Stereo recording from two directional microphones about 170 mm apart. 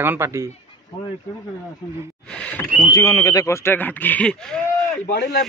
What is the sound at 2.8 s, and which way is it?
Speech, 20° left (ahead or behind).